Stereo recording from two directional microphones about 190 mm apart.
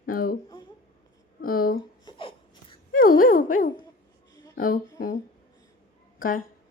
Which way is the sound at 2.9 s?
45° left (ahead or behind).